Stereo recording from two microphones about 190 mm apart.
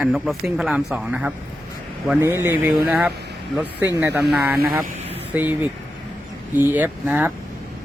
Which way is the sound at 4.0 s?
10° right (ahead or behind).